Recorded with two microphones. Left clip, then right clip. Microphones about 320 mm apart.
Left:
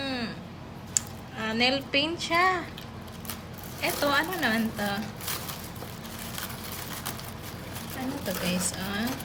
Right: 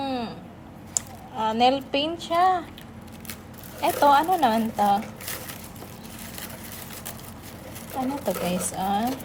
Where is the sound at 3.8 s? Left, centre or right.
Centre.